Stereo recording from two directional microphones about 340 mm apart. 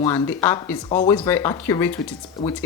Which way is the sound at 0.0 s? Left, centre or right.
Centre.